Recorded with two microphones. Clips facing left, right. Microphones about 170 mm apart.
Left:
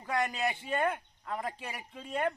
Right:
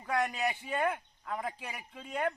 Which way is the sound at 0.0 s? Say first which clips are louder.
Even; centre (ahead or behind).